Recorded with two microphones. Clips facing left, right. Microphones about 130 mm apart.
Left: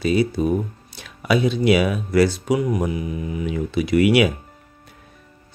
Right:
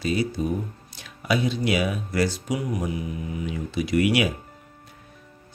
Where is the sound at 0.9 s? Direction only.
70° left (ahead or behind).